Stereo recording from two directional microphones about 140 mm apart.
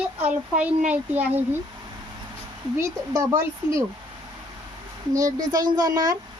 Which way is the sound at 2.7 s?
20° right (ahead or behind).